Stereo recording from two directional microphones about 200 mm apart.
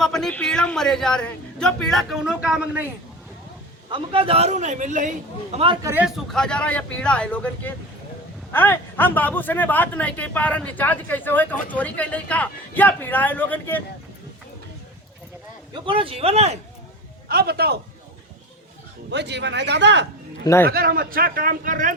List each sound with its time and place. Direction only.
0.0 s a man's voice: centre (ahead or behind)
3.8 s a man's voice: 25° right (ahead or behind)
5.8 s speech: 10° right (ahead or behind)
6.3 s a man's voice: 5° left (ahead or behind)
15.7 s speech: 25° right (ahead or behind)
17.2 s a man's voice: 50° right (ahead or behind)
19.1 s speech: 60° right (ahead or behind)
20.4 s a man's voice: 15° left (ahead or behind)
20.7 s a man's voice: 50° right (ahead or behind)